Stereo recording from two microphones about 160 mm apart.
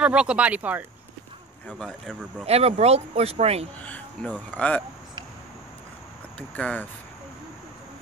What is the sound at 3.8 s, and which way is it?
Speech, 10° left (ahead or behind).